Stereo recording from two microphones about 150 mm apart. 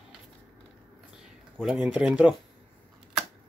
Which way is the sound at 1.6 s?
5° right (ahead or behind).